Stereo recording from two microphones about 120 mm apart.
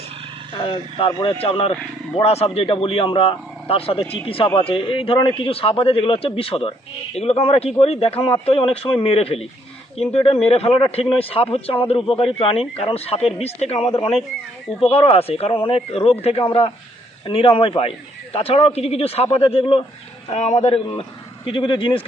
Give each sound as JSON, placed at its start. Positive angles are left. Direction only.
{"t": 0.5, "sound": "a man's voice", "side_deg": 45}
{"t": 20.3, "sound": "speech", "side_deg": 70}
{"t": 21.4, "sound": "a man's voice", "side_deg": 45}